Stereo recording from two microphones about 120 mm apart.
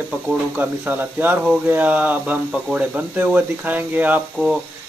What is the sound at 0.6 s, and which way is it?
Speech, 15° right (ahead or behind).